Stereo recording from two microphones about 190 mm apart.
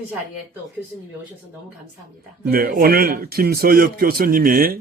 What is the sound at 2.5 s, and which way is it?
Speech, 50° right (ahead or behind).